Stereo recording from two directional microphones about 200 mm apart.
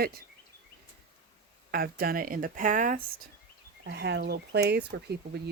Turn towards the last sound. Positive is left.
turn(degrees=-55)  # may be behind; listen again after turning